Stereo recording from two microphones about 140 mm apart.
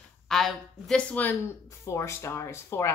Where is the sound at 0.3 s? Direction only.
Centre (ahead or behind).